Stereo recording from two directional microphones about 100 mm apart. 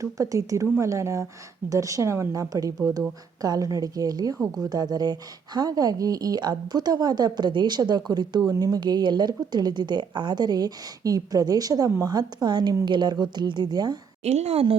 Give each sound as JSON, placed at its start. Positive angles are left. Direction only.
{"t": 0.0, "sound": "speech", "side_deg": -35}
{"t": 14.3, "sound": "speech", "side_deg": -90}